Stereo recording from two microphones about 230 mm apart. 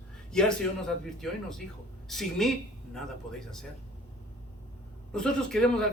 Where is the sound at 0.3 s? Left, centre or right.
Centre.